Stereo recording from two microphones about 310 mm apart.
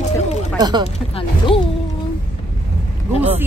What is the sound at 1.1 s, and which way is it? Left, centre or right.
Speech, centre.